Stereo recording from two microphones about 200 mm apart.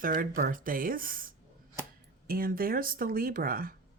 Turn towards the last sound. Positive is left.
turn(degrees=-45)  # may be behind; listen again after turning